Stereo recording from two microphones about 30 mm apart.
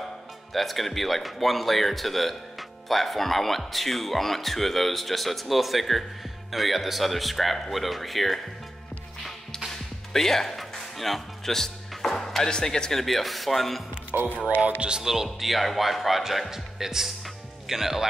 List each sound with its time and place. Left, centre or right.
0.5 s speech: centre
9.7 s music: centre
12.4 s speech: left
13.0 s speech: centre
14.1 s speech: right
14.8 s speech: right
15.3 s speech: centre